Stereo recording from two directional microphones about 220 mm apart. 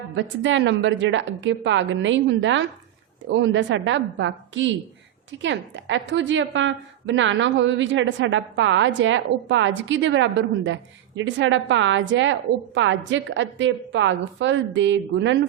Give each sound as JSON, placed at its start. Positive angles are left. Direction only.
{"t": 0.2, "sound": "a woman's voice", "side_deg": -55}